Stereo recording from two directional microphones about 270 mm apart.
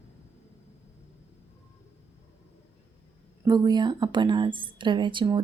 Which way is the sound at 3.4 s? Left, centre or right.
Centre.